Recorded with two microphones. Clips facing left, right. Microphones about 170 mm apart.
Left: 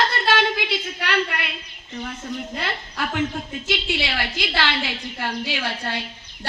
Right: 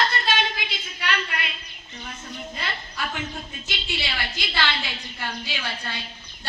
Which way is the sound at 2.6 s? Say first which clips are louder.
Left 4 dB; 70° left (ahead or behind).